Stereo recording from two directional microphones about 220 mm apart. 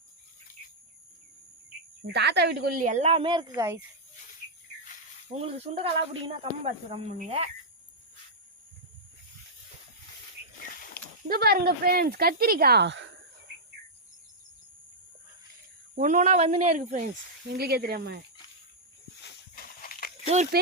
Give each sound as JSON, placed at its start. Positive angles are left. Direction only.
{"t": 2.0, "sound": "a woman's voice", "side_deg": -50}
{"t": 5.3, "sound": "speech", "side_deg": -25}
{"t": 11.0, "sound": "a sound", "side_deg": 45}
{"t": 11.3, "sound": "speech", "side_deg": -40}
{"t": 16.0, "sound": "a woman's voice", "side_deg": -35}
{"t": 17.5, "sound": "speech", "side_deg": -45}
{"t": 19.8, "sound": "a sound", "side_deg": 40}
{"t": 20.2, "sound": "speech", "side_deg": -30}